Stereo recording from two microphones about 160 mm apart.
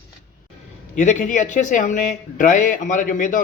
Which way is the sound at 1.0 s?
50° left (ahead or behind).